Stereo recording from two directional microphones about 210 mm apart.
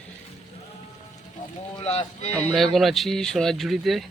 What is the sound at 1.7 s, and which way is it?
Boat, 30° left (ahead or behind).